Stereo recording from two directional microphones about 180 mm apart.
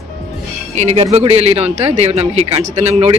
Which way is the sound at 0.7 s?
40° right (ahead or behind).